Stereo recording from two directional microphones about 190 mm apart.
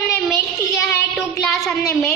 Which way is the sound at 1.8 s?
15° left (ahead or behind).